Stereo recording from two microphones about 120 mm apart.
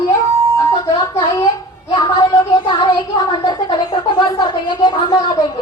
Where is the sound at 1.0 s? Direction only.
25° left (ahead or behind).